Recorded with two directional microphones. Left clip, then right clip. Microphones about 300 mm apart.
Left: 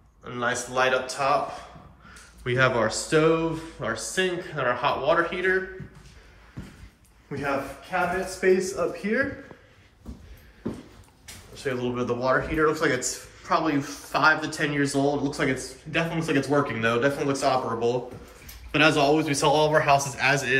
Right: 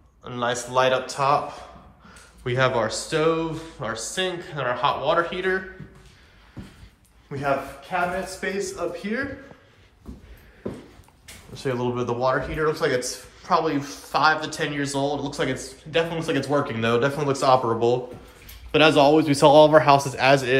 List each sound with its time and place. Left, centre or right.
0.2 s speech: centre
2.4 s speech: centre
7.3 s a man's voice: centre
11.5 s a sound: centre
11.9 s speech: centre